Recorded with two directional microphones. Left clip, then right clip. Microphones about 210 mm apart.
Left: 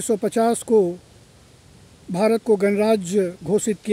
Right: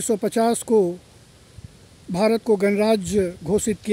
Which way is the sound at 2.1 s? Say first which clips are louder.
Left 1 dB; 5° right (ahead or behind).